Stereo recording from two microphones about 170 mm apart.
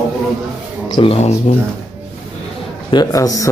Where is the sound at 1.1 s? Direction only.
40° left (ahead or behind).